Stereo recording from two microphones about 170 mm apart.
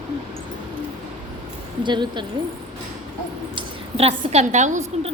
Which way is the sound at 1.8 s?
25° right (ahead or behind).